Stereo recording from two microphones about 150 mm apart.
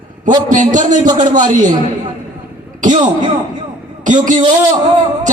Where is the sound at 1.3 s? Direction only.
60° right (ahead or behind).